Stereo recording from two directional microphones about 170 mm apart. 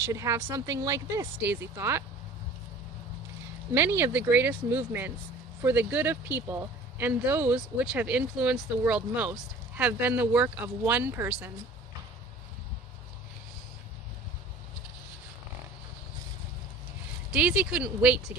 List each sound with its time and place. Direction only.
0.0 s speech: 20° right (ahead or behind)
3.8 s speech: 15° right (ahead or behind)
17.3 s speech: 5° right (ahead or behind)